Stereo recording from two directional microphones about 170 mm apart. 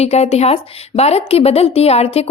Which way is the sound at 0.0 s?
40° left (ahead or behind).